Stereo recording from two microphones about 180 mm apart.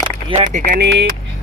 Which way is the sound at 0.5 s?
50° right (ahead or behind).